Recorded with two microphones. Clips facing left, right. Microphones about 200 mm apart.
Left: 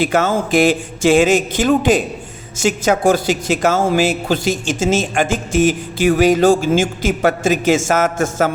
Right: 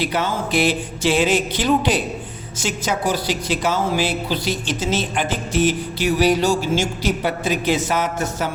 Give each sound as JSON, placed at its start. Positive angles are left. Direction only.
{"t": 0.0, "sound": "speech", "side_deg": 45}